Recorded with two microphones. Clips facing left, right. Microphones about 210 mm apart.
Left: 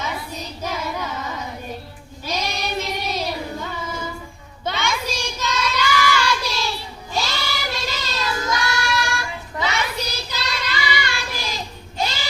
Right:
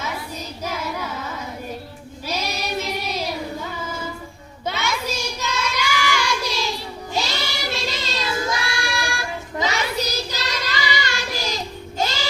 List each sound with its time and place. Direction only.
0.6 s child singing: 10° right (ahead or behind)
2.2 s child singing: 5° right (ahead or behind); by 11.5 s 40° right (ahead or behind)